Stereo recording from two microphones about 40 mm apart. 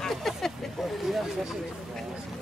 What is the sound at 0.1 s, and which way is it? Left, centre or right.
Vehicle, centre.